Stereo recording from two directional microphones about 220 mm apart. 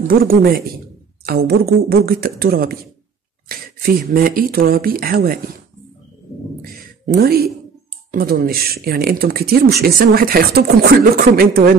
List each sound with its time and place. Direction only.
0.1 s speech: 40° right (ahead or behind)
1.5 s speech: 45° right (ahead or behind)
7.2 s speech: 45° right (ahead or behind)